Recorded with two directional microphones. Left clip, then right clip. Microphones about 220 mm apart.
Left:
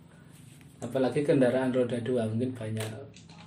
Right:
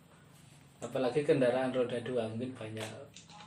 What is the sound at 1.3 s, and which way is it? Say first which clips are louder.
A man's voice: left 4 dB; 30° left (ahead or behind).